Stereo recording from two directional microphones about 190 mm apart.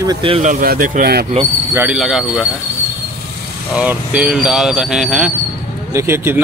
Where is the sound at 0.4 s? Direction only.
45° right (ahead or behind).